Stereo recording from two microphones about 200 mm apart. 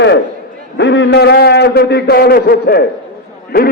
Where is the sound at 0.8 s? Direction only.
60° left (ahead or behind).